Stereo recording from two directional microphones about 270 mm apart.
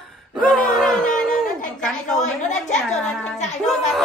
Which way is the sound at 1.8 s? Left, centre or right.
Centre.